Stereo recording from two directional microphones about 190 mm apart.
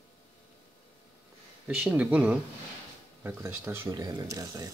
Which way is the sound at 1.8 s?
5° right (ahead or behind).